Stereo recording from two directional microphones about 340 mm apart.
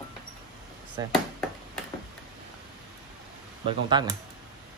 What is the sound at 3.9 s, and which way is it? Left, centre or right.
Speech, centre.